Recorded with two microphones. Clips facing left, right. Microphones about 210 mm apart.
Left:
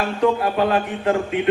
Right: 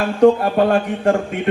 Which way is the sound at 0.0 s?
45° right (ahead or behind).